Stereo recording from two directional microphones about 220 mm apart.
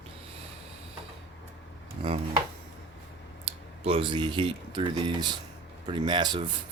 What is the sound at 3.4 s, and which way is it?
Speech, 25° right (ahead or behind).